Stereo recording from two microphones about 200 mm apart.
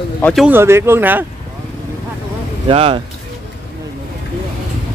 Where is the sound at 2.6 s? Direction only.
25° right (ahead or behind).